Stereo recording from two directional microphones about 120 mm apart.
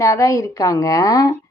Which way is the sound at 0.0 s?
25° left (ahead or behind).